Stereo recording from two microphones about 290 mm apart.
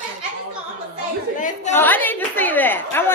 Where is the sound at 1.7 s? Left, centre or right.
Centre.